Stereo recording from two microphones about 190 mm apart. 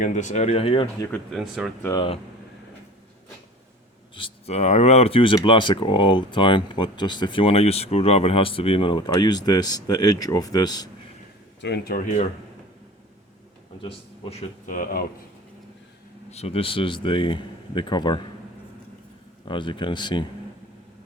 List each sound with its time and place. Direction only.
0.0 s speech: 40° left (ahead or behind)
1.1 s speech: centre (ahead or behind)
1.8 s speech: 15° left (ahead or behind)
4.1 s speech: 35° left (ahead or behind)
11.6 s speech: 55° left (ahead or behind)
13.8 s speech: 35° left (ahead or behind)
16.3 s speech: 35° left (ahead or behind)
19.5 s speech: 25° left (ahead or behind)